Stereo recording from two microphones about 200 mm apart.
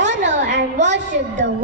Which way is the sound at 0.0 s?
60° right (ahead or behind).